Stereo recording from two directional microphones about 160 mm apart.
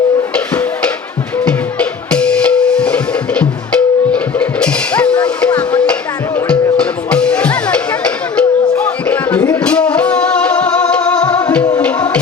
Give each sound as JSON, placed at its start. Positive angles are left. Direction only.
{"t": 0.3, "sound": "music", "side_deg": 10}